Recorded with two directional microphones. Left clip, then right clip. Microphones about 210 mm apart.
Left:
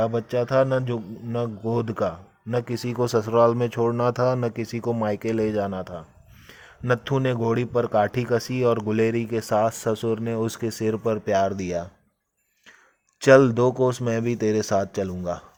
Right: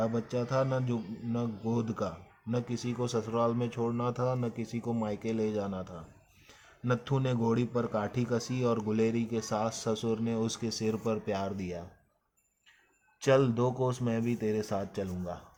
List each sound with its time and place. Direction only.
0.3 s a man's voice: 40° left (ahead or behind)
13.2 s speech: 35° left (ahead or behind)